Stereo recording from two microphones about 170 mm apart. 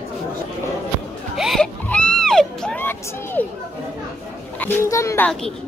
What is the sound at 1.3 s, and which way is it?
Music, centre (ahead or behind).